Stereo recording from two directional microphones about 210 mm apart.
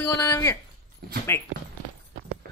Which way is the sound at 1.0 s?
50° right (ahead or behind).